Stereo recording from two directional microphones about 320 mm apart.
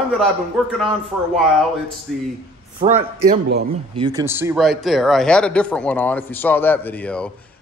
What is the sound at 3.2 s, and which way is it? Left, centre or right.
Speech, right.